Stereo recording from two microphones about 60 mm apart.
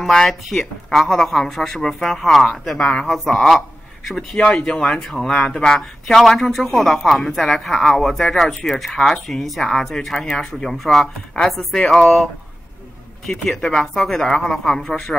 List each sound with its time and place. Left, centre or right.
0.0 s speech: centre
3.3 s speech: centre
4.1 s speech: centre
13.3 s speech: centre